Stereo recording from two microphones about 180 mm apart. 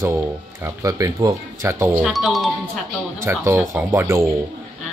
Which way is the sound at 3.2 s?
15° right (ahead or behind).